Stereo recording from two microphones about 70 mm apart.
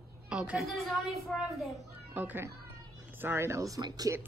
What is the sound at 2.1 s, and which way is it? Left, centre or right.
A woman's voice, right.